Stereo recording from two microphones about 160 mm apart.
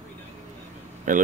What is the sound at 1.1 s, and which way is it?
Speech, 55° right (ahead or behind).